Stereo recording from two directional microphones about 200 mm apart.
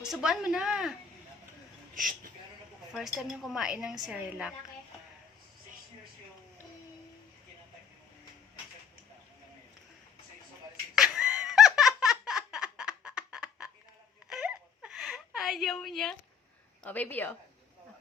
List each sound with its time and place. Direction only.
0.0 s a woman's voice: 5° right (ahead or behind)
2.0 s speech: 40° right (ahead or behind)
2.9 s a woman's voice: centre (ahead or behind)
10.9 s laughter: centre (ahead or behind)
14.3 s a sound: 5° right (ahead or behind)
16.8 s a woman's voice: 10° left (ahead or behind)